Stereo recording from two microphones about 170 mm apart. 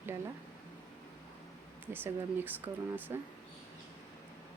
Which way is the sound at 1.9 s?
10° right (ahead or behind).